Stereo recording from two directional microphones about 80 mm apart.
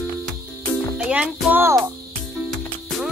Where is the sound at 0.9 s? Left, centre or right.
Centre.